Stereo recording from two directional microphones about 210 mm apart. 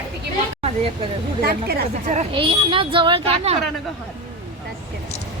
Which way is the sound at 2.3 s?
25° right (ahead or behind).